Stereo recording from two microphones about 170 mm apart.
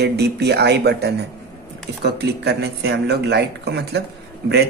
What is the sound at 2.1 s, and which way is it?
A man's voice, 75° right (ahead or behind).